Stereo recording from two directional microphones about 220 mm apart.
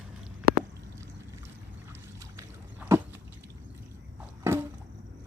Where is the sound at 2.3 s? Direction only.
10° right (ahead or behind).